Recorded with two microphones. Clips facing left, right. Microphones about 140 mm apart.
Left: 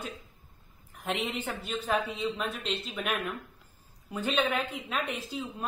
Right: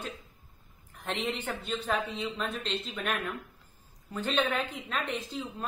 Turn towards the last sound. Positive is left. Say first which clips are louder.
# even
turn(degrees=10)  # may be behind; listen again after turning